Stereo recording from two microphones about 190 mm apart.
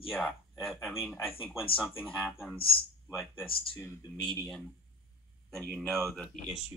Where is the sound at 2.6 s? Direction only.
30° left (ahead or behind).